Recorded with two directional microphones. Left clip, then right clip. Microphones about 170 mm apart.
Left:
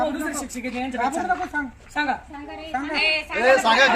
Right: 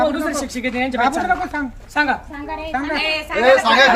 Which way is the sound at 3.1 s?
60° left (ahead or behind).